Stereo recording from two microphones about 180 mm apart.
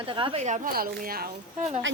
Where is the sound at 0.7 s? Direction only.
55° right (ahead or behind).